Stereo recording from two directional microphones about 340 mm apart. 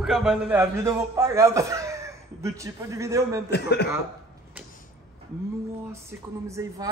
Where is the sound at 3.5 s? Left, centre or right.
Left.